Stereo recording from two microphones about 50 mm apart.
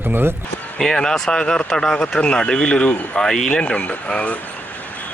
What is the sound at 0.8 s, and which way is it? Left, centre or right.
Speech, centre.